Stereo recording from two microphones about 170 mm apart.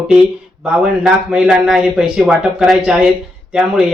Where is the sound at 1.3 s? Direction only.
Centre (ahead or behind).